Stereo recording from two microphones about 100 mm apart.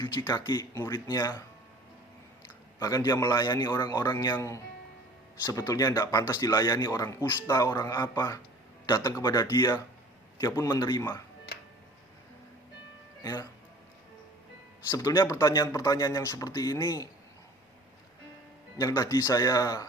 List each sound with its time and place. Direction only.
0.3 s speech: 45° left (ahead or behind)
2.4 s a man's voice: 35° left (ahead or behind)
4.4 s speech: 30° left (ahead or behind)
10.4 s a man's voice: 30° left (ahead or behind)
10.8 s speech: 50° left (ahead or behind)
14.8 s speech: 40° left (ahead or behind)
18.8 s speech: 40° left (ahead or behind)